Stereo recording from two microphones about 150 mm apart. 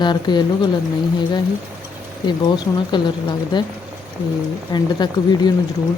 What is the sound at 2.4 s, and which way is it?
A woman's voice, 30° left (ahead or behind).